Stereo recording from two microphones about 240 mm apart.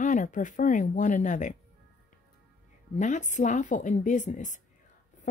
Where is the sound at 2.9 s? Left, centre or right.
Left.